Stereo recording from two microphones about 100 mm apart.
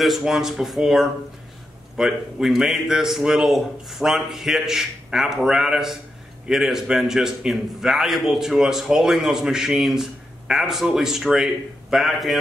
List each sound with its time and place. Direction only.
0.0 s a man's voice: centre (ahead or behind)